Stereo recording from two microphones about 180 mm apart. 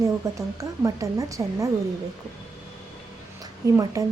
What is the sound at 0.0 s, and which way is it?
Speech, 15° right (ahead or behind).